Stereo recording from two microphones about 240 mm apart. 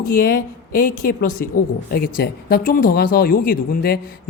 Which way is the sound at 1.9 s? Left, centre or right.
Left.